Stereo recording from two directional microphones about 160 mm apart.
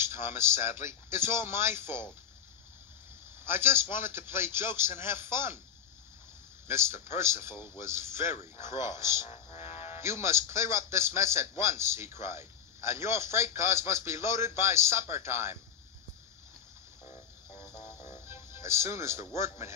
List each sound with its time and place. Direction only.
0.0 s a man's voice: 15° right (ahead or behind)
3.4 s a man's voice: 15° right (ahead or behind)
6.7 s a man's voice: 15° right (ahead or behind)
9.7 s music: 40° left (ahead or behind)
9.9 s a man's voice: 15° right (ahead or behind)
18.1 s music: 15° right (ahead or behind)
19.3 s a man's voice: 15° right (ahead or behind)